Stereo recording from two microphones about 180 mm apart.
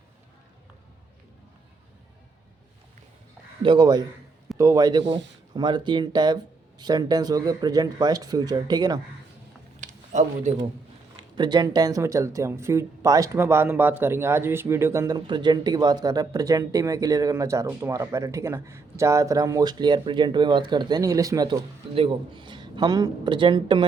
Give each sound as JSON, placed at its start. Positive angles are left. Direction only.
{"t": 3.6, "sound": "speech", "side_deg": -25}
{"t": 9.8, "sound": "a sound", "side_deg": -40}
{"t": 11.3, "sound": "speech", "side_deg": -25}